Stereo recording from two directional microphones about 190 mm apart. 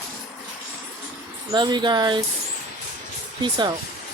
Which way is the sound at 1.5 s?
25° right (ahead or behind).